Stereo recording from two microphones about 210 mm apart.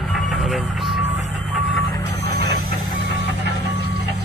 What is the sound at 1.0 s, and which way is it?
Vehicle, 35° right (ahead or behind).